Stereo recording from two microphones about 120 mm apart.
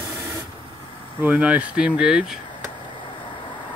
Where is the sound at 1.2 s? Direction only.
15° right (ahead or behind).